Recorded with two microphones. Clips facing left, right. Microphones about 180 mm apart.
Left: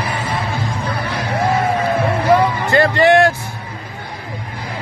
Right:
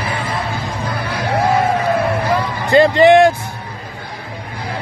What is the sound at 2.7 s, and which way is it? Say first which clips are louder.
Music: right 5 dB; 15° right (ahead or behind).